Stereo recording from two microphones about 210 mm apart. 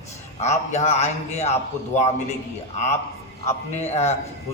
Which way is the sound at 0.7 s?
30° left (ahead or behind).